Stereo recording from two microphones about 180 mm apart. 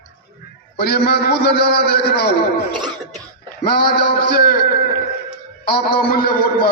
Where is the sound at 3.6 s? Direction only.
60° left (ahead or behind).